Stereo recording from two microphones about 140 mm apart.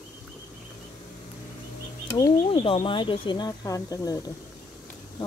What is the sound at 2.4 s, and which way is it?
Speech, 40° left (ahead or behind).